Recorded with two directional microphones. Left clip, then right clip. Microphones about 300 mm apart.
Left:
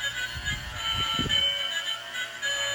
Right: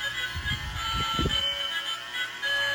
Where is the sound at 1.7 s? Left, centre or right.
Centre.